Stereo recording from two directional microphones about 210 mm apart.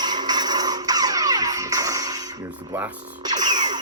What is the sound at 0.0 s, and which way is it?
Music, 20° right (ahead or behind).